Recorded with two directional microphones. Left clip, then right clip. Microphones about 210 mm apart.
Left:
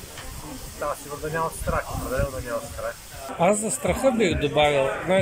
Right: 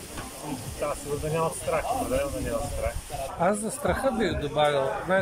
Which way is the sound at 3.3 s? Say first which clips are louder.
Left 5 dB; 5° left (ahead or behind).